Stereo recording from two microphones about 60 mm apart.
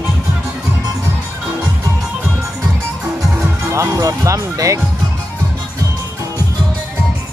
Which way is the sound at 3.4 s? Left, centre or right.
Right.